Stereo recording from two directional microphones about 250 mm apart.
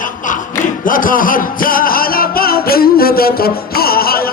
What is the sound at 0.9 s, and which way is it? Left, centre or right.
Music, left.